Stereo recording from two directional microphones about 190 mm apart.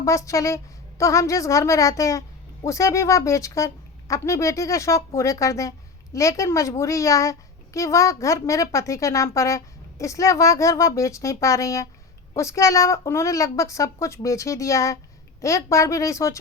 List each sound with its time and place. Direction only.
0.0 s a child's voice: 15° left (ahead or behind)